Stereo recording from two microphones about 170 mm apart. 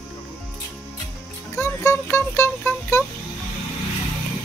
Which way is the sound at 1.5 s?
15° left (ahead or behind).